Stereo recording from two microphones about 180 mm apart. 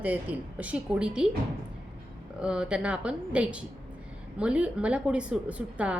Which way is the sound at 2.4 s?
5° right (ahead or behind).